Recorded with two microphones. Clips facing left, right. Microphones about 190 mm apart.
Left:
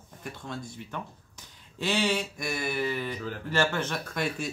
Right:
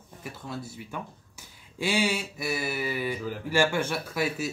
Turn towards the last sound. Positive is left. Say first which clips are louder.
# right 2 dB
turn(degrees=-5)  # may be behind; listen again after turning